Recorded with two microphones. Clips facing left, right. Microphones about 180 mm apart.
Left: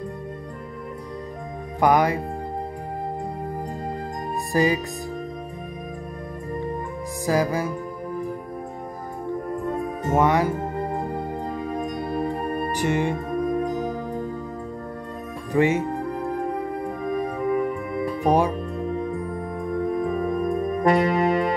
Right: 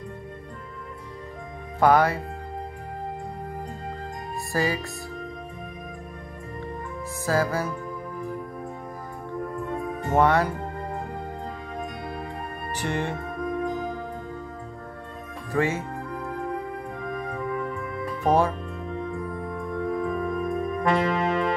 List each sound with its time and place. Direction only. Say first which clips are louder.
1.8 s music: even; 15° left (ahead or behind)
4.5 s music: left 5 dB; 20° left (ahead or behind)
7.2 s music: left 2 dB; 15° left (ahead or behind)
10.1 s music: left 1 dB; 15° left (ahead or behind)
10.6 s music: left 6 dB; 40° left (ahead or behind)
12.7 s music: left 4 dB; 15° left (ahead or behind)
13.7 s music: left 3 dB; 40° left (ahead or behind)
15.5 s music: left 5 dB; 15° left (ahead or behind)
15.8 s music: left 7 dB; 40° left (ahead or behind)
18.2 s speech: left 1 dB; 15° left (ahead or behind)
18.9 s music: left 2 dB; 40° left (ahead or behind)